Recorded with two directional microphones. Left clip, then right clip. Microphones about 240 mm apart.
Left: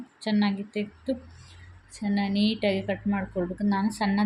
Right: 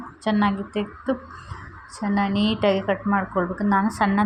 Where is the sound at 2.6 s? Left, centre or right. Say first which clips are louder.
Right 6 dB; centre.